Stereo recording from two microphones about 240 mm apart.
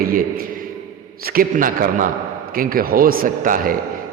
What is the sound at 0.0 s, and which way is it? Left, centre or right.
A man's voice, right.